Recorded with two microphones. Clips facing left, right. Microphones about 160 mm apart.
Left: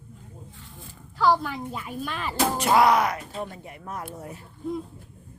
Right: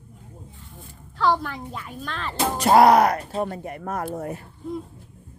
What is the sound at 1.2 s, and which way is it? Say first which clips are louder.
A woman's voice: even; 5° left (ahead or behind).